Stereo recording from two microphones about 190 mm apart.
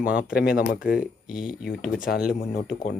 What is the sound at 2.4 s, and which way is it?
Speech, 50° left (ahead or behind).